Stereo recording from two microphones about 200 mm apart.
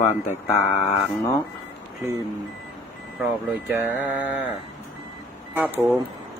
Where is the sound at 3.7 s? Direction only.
10° right (ahead or behind).